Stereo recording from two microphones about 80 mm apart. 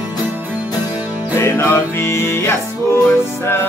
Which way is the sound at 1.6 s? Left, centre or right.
Left.